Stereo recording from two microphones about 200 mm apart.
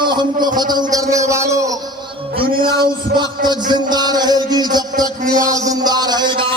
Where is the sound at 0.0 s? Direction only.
20° right (ahead or behind).